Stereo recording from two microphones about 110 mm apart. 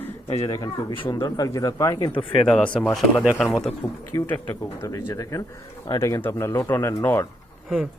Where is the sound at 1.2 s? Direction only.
30° left (ahead or behind).